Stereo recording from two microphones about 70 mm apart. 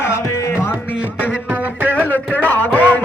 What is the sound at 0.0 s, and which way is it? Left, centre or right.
Music, left.